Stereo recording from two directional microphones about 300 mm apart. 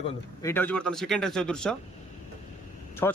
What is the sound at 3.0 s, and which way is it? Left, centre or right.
Speech, centre.